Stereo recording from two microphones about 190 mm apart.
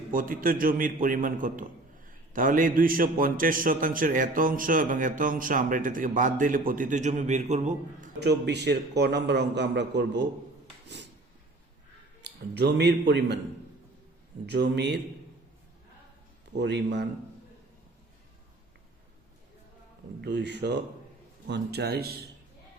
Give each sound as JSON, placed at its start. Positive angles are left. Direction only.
{"t": 0.1, "sound": "a man's voice", "side_deg": -45}
{"t": 8.2, "sound": "a man's voice", "side_deg": -60}
{"t": 10.8, "sound": "a sound", "side_deg": -65}
{"t": 12.2, "sound": "a man's voice", "side_deg": -60}
{"t": 14.5, "sound": "a man's voice", "side_deg": -60}
{"t": 16.6, "sound": "a man's voice", "side_deg": -60}
{"t": 20.2, "sound": "a man's voice", "side_deg": -65}